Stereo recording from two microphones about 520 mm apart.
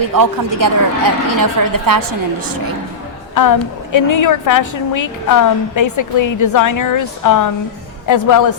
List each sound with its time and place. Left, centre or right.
0.1 s a woman's voice: right
3.3 s a woman's voice: left